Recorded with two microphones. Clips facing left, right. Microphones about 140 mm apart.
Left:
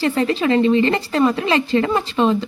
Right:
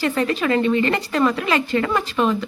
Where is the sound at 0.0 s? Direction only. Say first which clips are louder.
Left 2 dB; 30° left (ahead or behind).